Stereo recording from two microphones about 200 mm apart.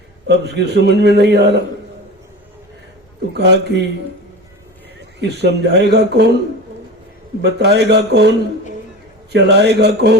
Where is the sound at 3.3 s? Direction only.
55° right (ahead or behind).